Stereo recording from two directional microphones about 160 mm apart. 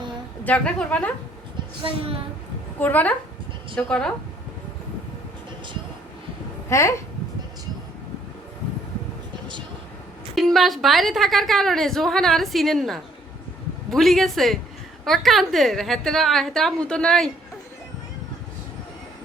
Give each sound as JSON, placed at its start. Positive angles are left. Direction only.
{"t": 0.4, "sound": "a woman's voice", "side_deg": 5}
{"t": 2.7, "sound": "a woman's voice", "side_deg": 10}
{"t": 6.7, "sound": "a woman's voice", "side_deg": 15}
{"t": 10.3, "sound": "a woman's voice", "side_deg": 0}